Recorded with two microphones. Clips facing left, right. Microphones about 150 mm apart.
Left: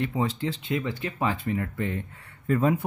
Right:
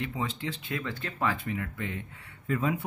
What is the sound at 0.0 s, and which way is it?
Speech, 35° left (ahead or behind).